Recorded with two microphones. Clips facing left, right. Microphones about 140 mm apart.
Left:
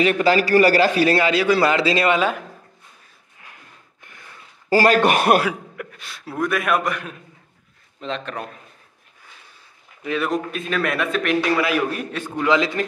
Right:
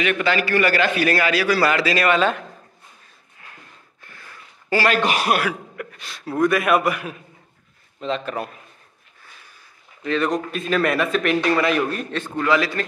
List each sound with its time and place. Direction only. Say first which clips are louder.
0.0 s a man's voice: left 4 dB; 35° left (ahead or behind)
2.1 s a man's voice: right 1 dB; 10° left (ahead or behind)
4.0 s gasp: right 1 dB; 20° left (ahead or behind)
4.6 s a man's voice: left 4 dB; 40° left (ahead or behind)
5.8 s a man's voice: right 1 dB; centre (ahead or behind)
10.0 s a man's voice: right 1 dB; 5° left (ahead or behind)